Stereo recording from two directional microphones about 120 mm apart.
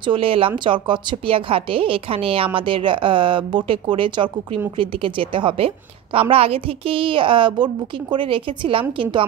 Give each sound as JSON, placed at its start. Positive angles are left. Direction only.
{"t": 0.0, "sound": "a woman's voice", "side_deg": -45}